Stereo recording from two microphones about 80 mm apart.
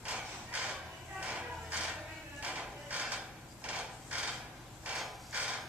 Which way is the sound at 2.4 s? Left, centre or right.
Centre.